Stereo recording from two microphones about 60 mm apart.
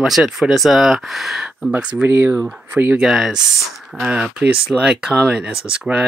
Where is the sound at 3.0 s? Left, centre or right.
Centre.